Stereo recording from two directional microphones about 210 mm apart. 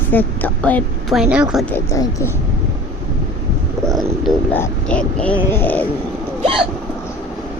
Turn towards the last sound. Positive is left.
turn(degrees=-25)  # may be behind; listen again after turning